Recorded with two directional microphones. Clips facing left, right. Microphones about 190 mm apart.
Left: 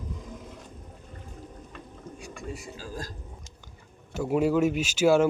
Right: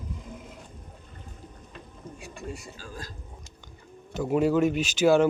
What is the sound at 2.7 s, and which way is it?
Speech, 35° left (ahead or behind).